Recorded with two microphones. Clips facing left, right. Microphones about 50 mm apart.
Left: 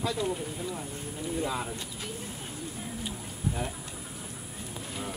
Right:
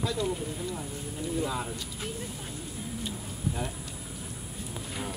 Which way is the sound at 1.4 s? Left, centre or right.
Centre.